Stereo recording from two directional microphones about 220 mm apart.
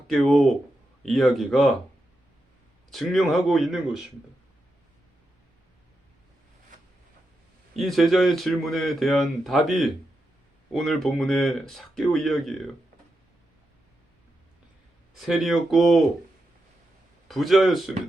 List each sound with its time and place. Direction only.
0.1 s speech: centre (ahead or behind)
2.9 s speech: centre (ahead or behind)
7.8 s speech: centre (ahead or behind)
15.2 s speech: centre (ahead or behind)
17.2 s speech: centre (ahead or behind)